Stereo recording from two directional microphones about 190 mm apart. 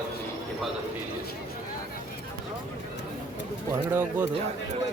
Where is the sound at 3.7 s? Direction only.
10° right (ahead or behind).